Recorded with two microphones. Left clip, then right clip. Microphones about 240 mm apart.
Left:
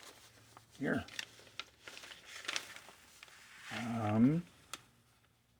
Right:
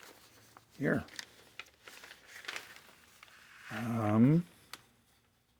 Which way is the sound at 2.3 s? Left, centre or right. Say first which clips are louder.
Left 1 dB; centre.